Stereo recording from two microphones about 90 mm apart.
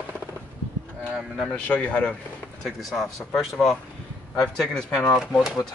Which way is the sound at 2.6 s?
Centre (ahead or behind).